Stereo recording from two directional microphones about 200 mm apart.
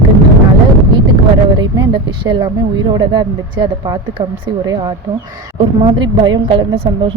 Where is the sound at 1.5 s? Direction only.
20° right (ahead or behind).